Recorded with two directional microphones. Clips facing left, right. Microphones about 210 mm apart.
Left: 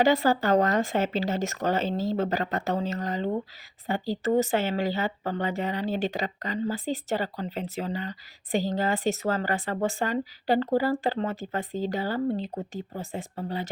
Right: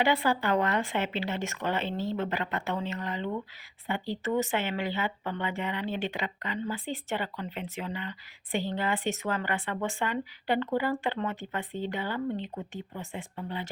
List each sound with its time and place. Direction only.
0.0 s speech: 40° left (ahead or behind)